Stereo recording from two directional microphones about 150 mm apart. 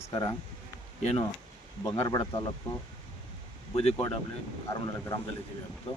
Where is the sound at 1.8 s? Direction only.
20° left (ahead or behind).